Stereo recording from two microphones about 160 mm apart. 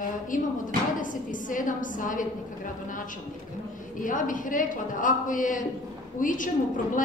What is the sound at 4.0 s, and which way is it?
A woman's voice, 55° left (ahead or behind).